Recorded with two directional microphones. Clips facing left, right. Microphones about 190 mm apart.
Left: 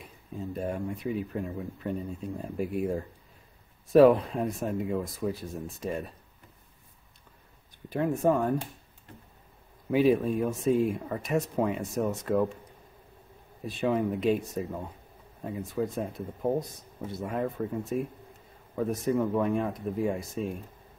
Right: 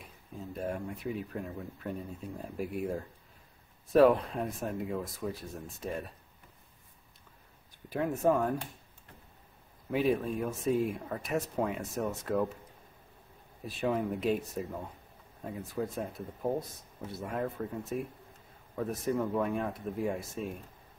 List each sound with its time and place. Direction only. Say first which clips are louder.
0.5 s speech: left 3 dB; centre (ahead or behind)
7.9 s speech: left 3 dB; centre (ahead or behind)
9.8 s speech: left 6 dB; centre (ahead or behind)
13.7 s speech: left 4 dB; centre (ahead or behind)